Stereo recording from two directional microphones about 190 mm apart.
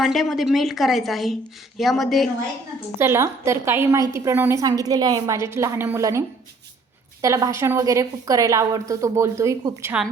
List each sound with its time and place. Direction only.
0.0 s a woman's voice: centre (ahead or behind)
3.0 s a woman's voice: 15° right (ahead or behind)